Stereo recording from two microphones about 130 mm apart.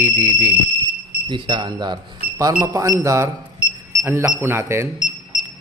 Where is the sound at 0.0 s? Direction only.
90° right.